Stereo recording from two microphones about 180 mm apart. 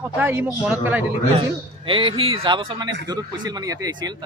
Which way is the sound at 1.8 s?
30° right (ahead or behind).